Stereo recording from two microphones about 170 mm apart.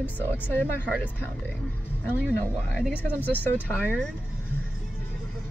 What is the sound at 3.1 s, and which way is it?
Speech, 10° left (ahead or behind).